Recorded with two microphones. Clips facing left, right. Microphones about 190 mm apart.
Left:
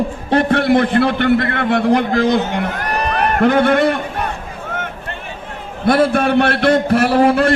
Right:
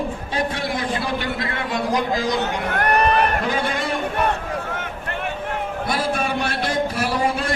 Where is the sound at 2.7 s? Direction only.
60° right (ahead or behind).